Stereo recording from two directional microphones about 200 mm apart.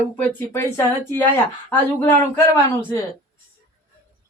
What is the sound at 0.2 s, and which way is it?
Speech, 10° left (ahead or behind).